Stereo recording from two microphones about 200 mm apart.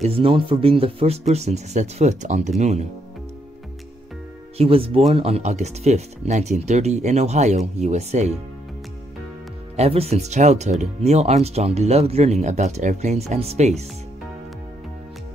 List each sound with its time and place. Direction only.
0.0 s speech: 30° right (ahead or behind)
4.6 s speech: 30° right (ahead or behind)
9.8 s speech: 30° right (ahead or behind)